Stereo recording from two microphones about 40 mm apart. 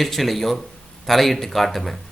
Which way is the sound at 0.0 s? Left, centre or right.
Centre.